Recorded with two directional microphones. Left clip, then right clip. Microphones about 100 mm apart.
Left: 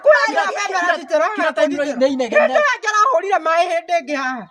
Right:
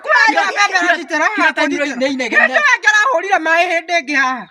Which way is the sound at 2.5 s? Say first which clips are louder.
Right 4 dB; 40° left (ahead or behind).